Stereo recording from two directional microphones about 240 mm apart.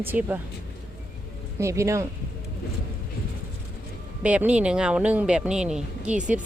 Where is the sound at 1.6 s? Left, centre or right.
Centre.